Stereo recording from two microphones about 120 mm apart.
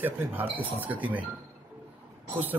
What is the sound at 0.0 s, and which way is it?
Speech, 15° right (ahead or behind).